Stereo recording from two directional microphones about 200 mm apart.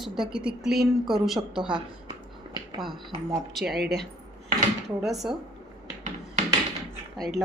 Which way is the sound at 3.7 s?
50° right (ahead or behind).